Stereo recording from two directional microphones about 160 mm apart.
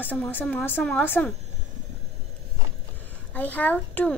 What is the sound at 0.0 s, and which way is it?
Speech, 10° left (ahead or behind).